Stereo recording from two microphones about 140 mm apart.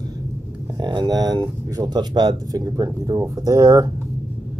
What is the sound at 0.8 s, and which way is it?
Speech, 35° right (ahead or behind).